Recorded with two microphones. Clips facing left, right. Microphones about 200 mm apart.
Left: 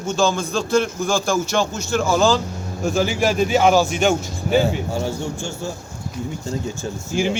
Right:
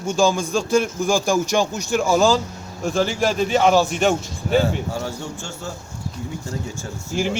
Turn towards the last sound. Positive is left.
turn(degrees=0)  # may be behind; listen again after turning